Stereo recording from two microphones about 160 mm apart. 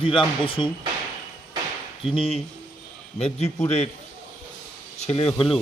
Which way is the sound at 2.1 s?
35° left (ahead or behind).